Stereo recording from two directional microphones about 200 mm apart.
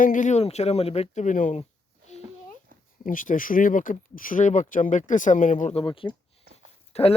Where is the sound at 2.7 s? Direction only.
45° right (ahead or behind).